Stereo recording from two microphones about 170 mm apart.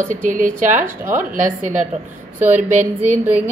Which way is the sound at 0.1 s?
50° right (ahead or behind).